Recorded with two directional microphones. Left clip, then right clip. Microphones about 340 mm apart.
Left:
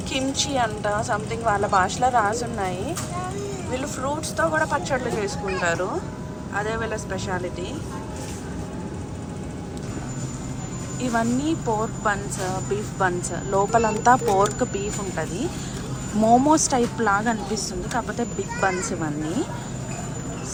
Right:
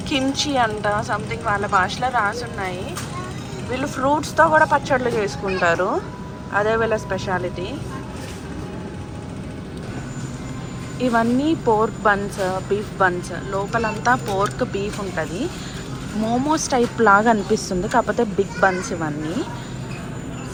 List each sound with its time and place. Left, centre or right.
0.1 s speech: centre
11.0 s speech: centre